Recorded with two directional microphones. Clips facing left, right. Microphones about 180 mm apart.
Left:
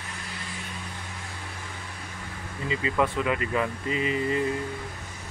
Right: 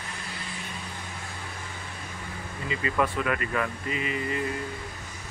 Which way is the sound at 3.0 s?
20° left (ahead or behind).